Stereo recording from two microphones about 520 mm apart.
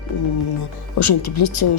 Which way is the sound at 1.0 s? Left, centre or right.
Left.